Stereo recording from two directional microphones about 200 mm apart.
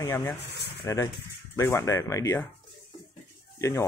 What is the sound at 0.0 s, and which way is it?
Speech, 15° left (ahead or behind).